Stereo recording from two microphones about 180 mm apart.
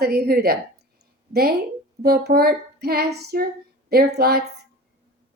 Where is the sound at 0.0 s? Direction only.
60° right (ahead or behind).